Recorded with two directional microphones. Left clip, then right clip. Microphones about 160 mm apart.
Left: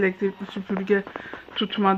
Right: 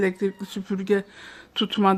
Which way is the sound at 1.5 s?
45° right (ahead or behind).